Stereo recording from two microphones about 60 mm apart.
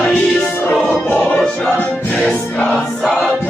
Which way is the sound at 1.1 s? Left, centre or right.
Centre.